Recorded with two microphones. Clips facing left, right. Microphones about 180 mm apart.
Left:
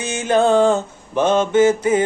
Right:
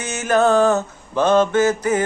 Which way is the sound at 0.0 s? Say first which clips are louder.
Left 1 dB; 25° left (ahead or behind).